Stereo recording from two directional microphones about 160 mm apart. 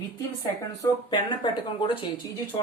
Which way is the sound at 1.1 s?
30° left (ahead or behind).